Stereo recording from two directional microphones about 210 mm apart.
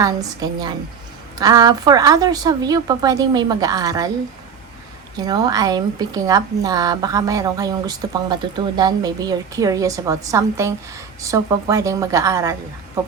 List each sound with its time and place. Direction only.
0.0 s a woman's voice: 15° right (ahead or behind)
5.1 s a woman's voice: 20° right (ahead or behind)